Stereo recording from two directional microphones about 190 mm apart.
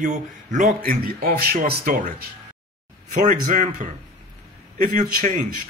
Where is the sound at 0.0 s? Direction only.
40° right (ahead or behind).